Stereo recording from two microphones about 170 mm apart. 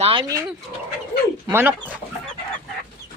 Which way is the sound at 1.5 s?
15° right (ahead or behind).